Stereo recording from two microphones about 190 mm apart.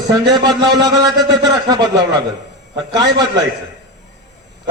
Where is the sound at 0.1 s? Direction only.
20° right (ahead or behind).